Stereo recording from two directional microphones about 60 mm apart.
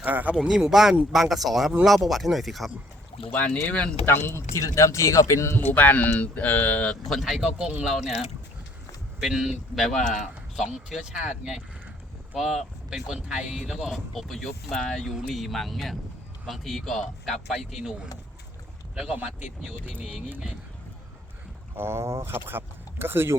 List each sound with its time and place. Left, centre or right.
0.0 s speech: right
0.4 s speech: centre
3.3 s speech: left
4.0 s speech: left
4.5 s speech: left
5.5 s speech: left
7.1 s speech: centre
9.2 s speech: centre
13.1 s speech: centre
13.9 s speech: centre
21.8 s speech: right